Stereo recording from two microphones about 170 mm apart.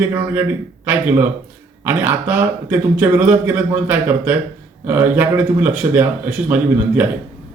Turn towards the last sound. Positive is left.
turn(degrees=-10)  # may be behind; listen again after turning